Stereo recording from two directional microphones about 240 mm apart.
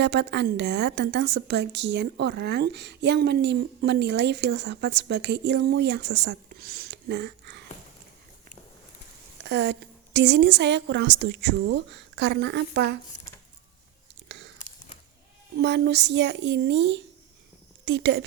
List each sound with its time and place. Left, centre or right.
0.0 s a woman's voice: right
9.4 s a woman's voice: right
14.3 s a sound: right
15.5 s a woman's voice: right